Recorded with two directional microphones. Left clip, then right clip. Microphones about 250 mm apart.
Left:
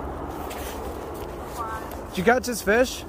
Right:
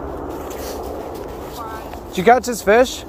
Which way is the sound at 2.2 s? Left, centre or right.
Centre.